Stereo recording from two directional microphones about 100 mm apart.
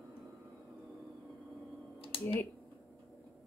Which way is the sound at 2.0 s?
65° left (ahead or behind).